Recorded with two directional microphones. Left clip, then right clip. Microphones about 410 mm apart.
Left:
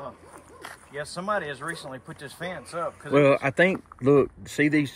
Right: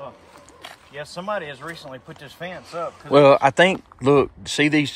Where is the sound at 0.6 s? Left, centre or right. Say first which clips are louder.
Right 1 dB; centre.